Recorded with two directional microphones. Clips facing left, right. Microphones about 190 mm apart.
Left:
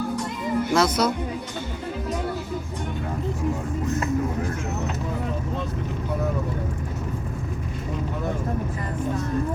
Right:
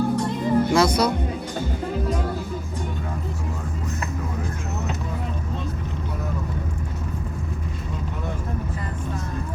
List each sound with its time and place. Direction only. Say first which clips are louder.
0.2 s music: right 5 dB; 30° right (ahead or behind)
0.7 s speech: left 2 dB; centre (ahead or behind)